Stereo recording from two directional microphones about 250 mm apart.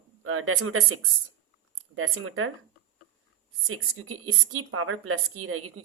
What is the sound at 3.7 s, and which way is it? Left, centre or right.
A woman's voice, right.